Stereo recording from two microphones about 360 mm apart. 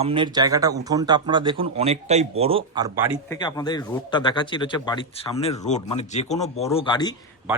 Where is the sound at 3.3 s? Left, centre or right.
Centre.